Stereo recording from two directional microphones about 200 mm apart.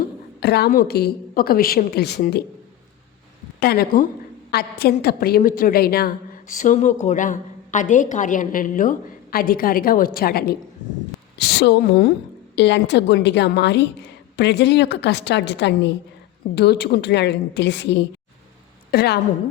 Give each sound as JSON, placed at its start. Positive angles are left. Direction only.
{"t": 0.3, "sound": "a woman's voice", "side_deg": 55}
{"t": 3.6, "sound": "a woman's voice", "side_deg": 50}